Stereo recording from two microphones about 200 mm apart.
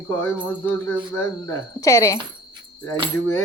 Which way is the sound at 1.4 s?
15° left (ahead or behind).